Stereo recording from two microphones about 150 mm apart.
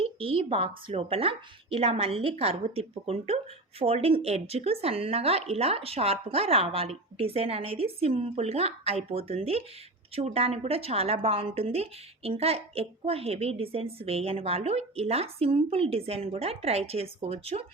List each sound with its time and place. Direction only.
0.0 s a woman's voice: 40° right (ahead or behind)